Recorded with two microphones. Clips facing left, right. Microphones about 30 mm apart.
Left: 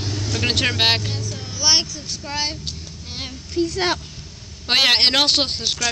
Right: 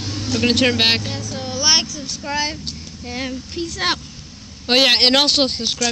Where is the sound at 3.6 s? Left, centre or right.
Right.